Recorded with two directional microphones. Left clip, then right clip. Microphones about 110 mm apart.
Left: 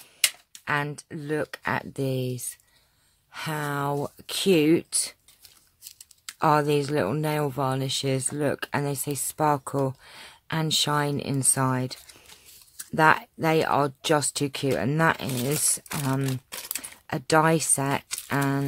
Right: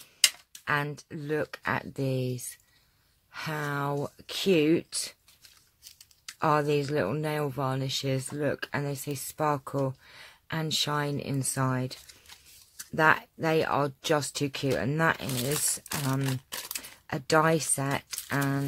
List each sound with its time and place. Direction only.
0.5 s speech: 20° left (ahead or behind); by 16.3 s 45° left (ahead or behind)
16.3 s speech: centre (ahead or behind)
16.7 s speech: 35° left (ahead or behind)